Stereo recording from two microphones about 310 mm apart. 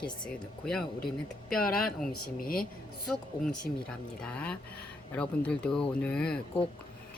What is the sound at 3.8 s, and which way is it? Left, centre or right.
Speech, centre.